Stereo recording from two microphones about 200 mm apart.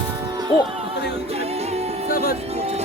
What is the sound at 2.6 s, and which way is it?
Music, 30° right (ahead or behind).